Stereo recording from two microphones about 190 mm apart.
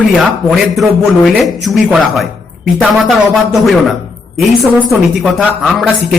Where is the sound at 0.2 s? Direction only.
Centre (ahead or behind).